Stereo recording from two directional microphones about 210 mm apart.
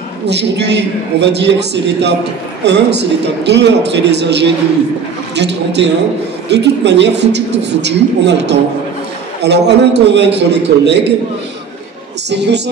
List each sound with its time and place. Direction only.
0.3 s a woman's voice: 55° right (ahead or behind)
12.3 s a woman's voice: 55° right (ahead or behind)